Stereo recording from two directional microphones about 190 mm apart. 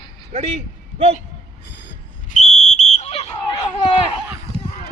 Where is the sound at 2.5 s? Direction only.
30° right (ahead or behind).